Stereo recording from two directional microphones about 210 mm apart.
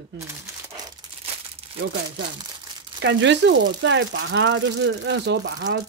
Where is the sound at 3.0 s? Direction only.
55° right (ahead or behind).